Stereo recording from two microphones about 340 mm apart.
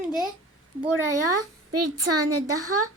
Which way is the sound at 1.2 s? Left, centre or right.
Right.